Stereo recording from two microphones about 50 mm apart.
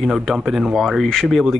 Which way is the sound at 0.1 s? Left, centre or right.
Centre.